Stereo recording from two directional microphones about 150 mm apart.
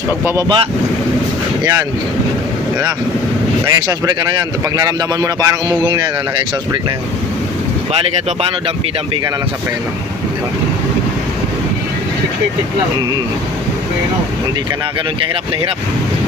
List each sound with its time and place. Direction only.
0.4 s speech: 30° right (ahead or behind)
3.7 s music: 25° right (ahead or behind)